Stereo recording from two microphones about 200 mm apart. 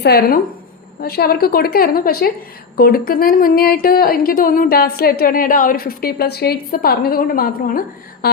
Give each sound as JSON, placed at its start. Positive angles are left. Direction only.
{"t": 0.0, "sound": "a woman's voice", "side_deg": 50}